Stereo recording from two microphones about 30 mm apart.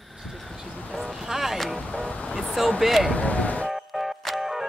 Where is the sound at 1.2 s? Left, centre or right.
Centre.